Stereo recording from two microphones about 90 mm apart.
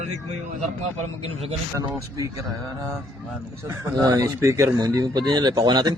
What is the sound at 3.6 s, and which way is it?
Speech, 30° right (ahead or behind).